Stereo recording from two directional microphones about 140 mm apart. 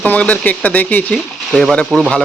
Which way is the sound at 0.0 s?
10° left (ahead or behind).